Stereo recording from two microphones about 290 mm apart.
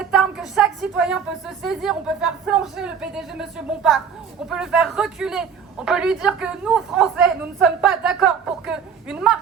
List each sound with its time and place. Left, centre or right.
0.0 s a sound: centre
1.6 s a man's voice: centre
4.4 s a man's voice: centre